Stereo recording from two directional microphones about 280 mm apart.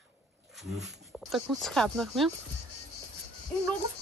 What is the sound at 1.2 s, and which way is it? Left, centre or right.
Speech, centre.